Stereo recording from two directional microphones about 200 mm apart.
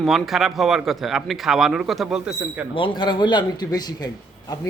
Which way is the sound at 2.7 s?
25° left (ahead or behind).